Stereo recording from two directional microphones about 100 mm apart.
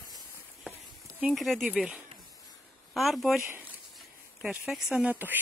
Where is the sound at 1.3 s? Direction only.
Centre (ahead or behind).